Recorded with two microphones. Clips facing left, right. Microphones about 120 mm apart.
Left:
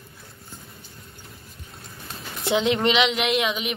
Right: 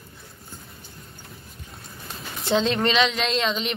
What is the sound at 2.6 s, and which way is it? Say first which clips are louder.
Speech: left 1 dB; 20° left (ahead or behind).